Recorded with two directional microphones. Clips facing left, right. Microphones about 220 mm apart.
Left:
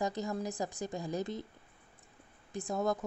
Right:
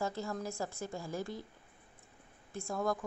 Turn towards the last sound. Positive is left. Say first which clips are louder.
# left 2 dB
turn(degrees=20)  # may be behind; listen again after turning